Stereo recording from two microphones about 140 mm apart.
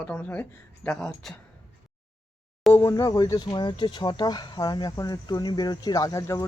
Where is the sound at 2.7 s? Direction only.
20° left (ahead or behind).